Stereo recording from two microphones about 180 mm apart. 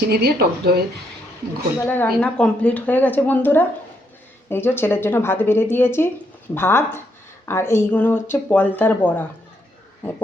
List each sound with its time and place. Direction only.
0.1 s speech: 60° right (ahead or behind)
1.8 s a woman's voice: 10° left (ahead or behind)